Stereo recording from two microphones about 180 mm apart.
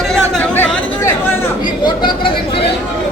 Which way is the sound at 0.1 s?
10° left (ahead or behind).